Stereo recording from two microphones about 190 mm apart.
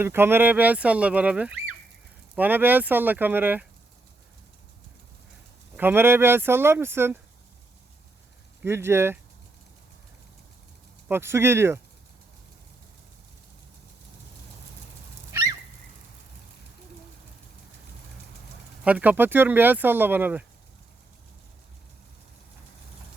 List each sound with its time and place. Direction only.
0.0 s speech: 10° right (ahead or behind)
5.7 s speech: 10° right (ahead or behind)
8.6 s speech: 15° right (ahead or behind)
11.1 s speech: 15° right (ahead or behind)
15.3 s a sound: 15° right (ahead or behind)
18.9 s speech: 10° right (ahead or behind)